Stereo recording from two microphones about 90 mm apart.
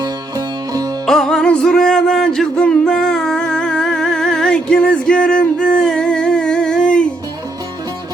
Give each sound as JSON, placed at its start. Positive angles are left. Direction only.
{"t": 0.0, "sound": "music", "side_deg": -45}
{"t": 1.0, "sound": "music", "side_deg": 5}